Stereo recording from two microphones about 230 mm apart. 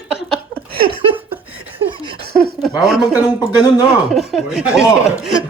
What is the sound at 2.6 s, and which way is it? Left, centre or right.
Speech, centre.